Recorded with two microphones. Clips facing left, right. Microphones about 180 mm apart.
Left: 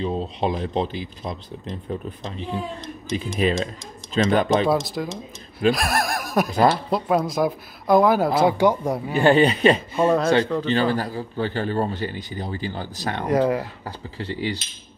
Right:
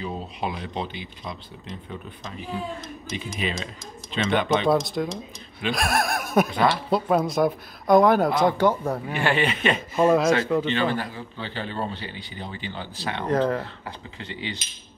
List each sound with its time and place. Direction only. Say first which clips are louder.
0.0 s a man's voice: left 6 dB; 30° left (ahead or behind)
3.3 s a man's voice: left 10 dB; 40° left (ahead or behind)
4.6 s speech: even; centre (ahead or behind)
9.1 s a man's voice: left 9 dB; 35° left (ahead or behind)
9.9 s speech: left 1 dB; centre (ahead or behind)
10.7 s a man's voice: left 4 dB; 35° left (ahead or behind)
13.3 s speech: left 3 dB; 10° left (ahead or behind)
13.8 s a man's voice: left 6 dB; 35° left (ahead or behind)